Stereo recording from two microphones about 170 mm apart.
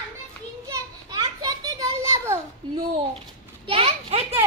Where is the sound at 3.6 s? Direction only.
35° right (ahead or behind).